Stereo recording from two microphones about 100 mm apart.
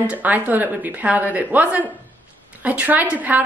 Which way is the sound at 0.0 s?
15° right (ahead or behind).